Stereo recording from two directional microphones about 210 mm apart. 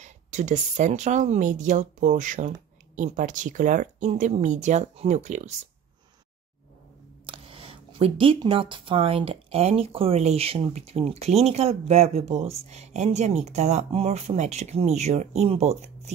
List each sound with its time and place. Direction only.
0.0 s speech: 35° right (ahead or behind)
7.2 s speech: 25° right (ahead or behind)